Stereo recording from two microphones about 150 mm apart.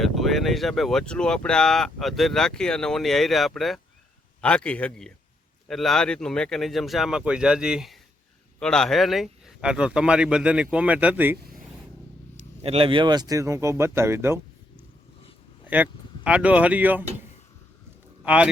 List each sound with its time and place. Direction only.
0.0 s speech: centre (ahead or behind)
12.6 s speech: 40° right (ahead or behind); by 14.3 s 15° right (ahead or behind)
15.6 s speech: 10° right (ahead or behind)